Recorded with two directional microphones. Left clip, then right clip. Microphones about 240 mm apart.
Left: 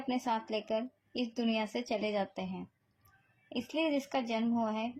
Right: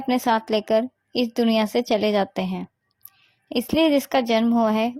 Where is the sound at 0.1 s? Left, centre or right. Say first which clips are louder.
Right 13 dB; right.